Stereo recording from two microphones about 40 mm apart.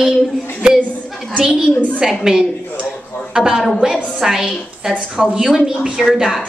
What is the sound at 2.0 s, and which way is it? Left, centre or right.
Speech, centre.